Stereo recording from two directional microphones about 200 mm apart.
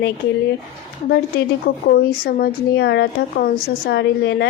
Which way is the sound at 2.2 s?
50° left (ahead or behind).